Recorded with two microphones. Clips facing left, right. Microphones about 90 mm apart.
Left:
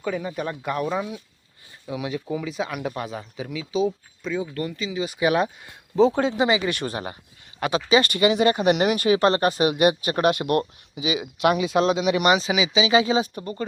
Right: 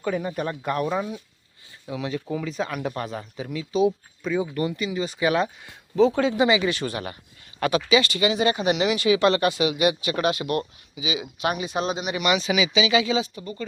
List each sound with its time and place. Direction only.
0.0 s speech: 5° right (ahead or behind)
1.9 s speech: 10° left (ahead or behind); by 4.9 s 10° right (ahead or behind)
4.9 s speech: 10° left (ahead or behind)
6.1 s speech: 35° left (ahead or behind); by 12.2 s 90° left
12.2 s speech: 35° left (ahead or behind)
12.5 s speech: 25° left (ahead or behind); by 13.7 s 45° left (ahead or behind)